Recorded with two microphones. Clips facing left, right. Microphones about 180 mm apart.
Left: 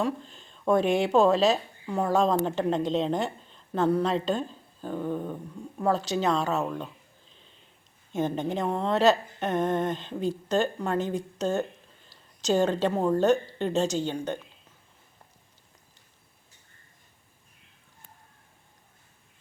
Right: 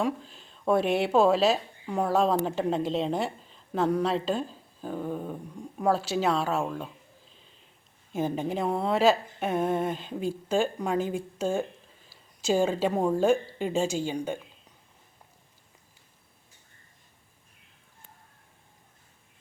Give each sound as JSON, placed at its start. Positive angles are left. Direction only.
{"t": 0.0, "sound": "a woman's voice", "side_deg": -5}
{"t": 7.4, "sound": "a sound", "side_deg": 0}
{"t": 8.1, "sound": "a woman's voice", "side_deg": -5}